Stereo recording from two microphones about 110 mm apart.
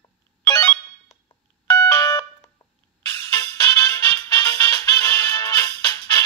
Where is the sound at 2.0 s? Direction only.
30° left (ahead or behind).